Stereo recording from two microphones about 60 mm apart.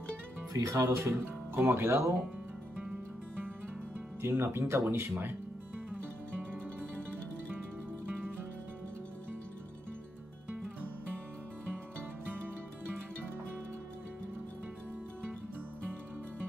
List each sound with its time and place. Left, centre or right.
0.5 s speech: right
4.2 s speech: right